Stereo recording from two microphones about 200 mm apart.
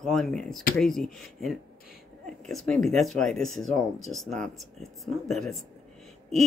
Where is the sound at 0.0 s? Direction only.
Centre (ahead or behind).